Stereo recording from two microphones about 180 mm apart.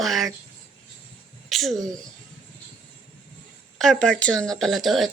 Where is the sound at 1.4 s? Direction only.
Centre (ahead or behind).